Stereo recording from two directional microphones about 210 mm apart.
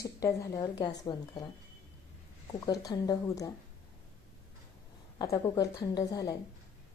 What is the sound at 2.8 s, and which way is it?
Speech, 20° left (ahead or behind).